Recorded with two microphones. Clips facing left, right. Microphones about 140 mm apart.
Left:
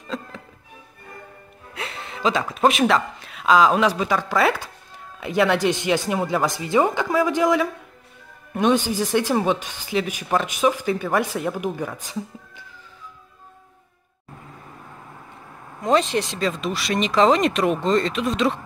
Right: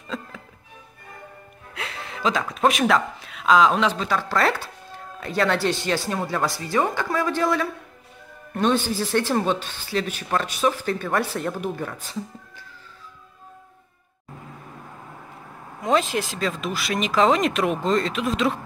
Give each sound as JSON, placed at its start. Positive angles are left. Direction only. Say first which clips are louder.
{"t": 0.1, "sound": "speech", "louder": "left 2 dB", "side_deg": 0}
{"t": 1.8, "sound": "speech", "louder": "left 2 dB", "side_deg": 0}
{"t": 15.8, "sound": "speech", "louder": "left 2 dB", "side_deg": 0}